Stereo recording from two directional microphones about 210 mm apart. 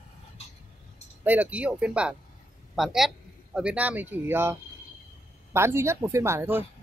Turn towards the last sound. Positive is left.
turn(degrees=-10)  # may be behind; listen again after turning